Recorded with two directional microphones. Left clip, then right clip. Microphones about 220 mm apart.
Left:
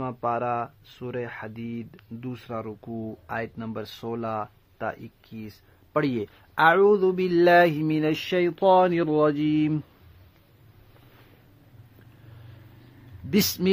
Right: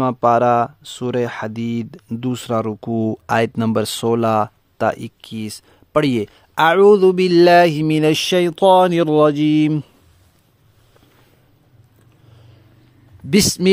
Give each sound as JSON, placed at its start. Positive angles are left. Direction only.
{"t": 0.0, "sound": "speech", "side_deg": -60}
{"t": 13.3, "sound": "speech", "side_deg": -40}